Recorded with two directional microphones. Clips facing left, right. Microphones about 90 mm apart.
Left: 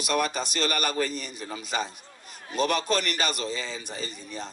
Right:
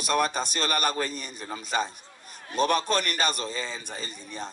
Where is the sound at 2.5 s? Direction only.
40° right (ahead or behind).